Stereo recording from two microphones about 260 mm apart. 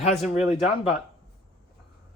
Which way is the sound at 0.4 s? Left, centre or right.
Centre.